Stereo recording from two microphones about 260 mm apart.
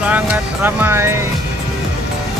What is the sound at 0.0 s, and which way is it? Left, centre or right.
Music, centre.